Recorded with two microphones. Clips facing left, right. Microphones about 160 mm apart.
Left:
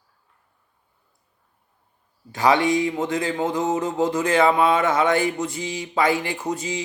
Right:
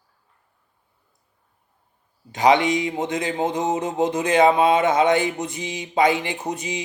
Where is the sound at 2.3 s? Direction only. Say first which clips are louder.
Right 1 dB; 20° right (ahead or behind).